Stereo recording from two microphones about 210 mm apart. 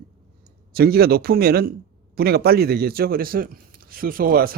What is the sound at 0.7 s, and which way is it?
A man's voice, 45° right (ahead or behind).